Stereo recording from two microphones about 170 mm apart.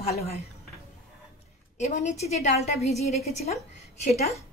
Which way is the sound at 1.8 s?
45° left (ahead or behind).